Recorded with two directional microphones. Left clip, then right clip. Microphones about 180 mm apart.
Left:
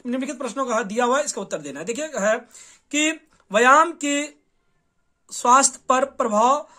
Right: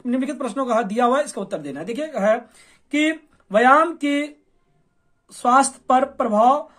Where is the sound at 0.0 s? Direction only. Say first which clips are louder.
Right 3 dB; 15° left (ahead or behind).